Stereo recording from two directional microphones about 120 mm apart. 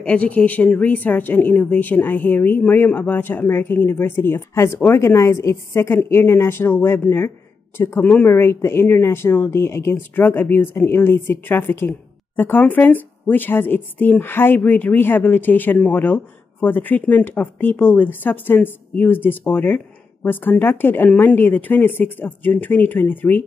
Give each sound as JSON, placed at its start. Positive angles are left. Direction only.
{"t": 0.0, "sound": "a woman's voice", "side_deg": 10}